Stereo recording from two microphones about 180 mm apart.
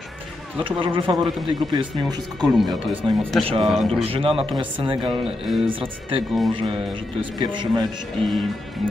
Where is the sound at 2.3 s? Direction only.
Centre (ahead or behind).